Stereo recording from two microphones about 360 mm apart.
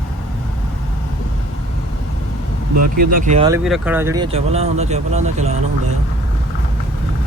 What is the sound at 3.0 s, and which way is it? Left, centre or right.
Speech, right.